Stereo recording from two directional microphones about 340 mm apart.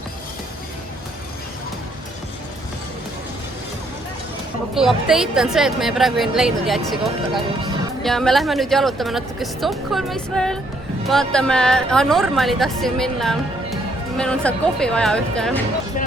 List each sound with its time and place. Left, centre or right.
4.7 s a woman's voice: centre